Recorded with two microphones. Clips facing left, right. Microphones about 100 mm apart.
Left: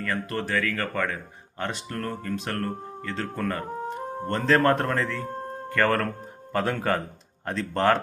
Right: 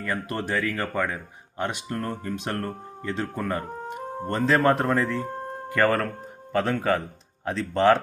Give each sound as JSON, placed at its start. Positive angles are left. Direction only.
{"t": 0.0, "sound": "speech", "side_deg": -15}